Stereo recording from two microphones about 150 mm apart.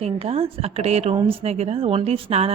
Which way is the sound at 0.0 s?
45° right (ahead or behind).